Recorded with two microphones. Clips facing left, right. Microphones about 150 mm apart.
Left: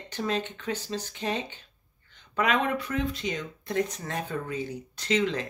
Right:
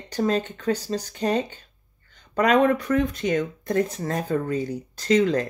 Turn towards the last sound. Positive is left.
turn(degrees=-40)  # may be behind; listen again after turning